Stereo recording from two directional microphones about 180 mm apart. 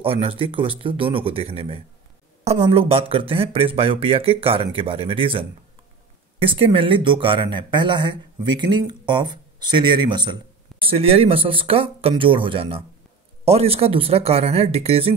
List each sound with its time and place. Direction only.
0.0 s speech: 30° right (ahead or behind)